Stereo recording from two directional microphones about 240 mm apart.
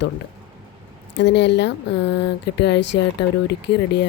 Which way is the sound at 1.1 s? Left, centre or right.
Left.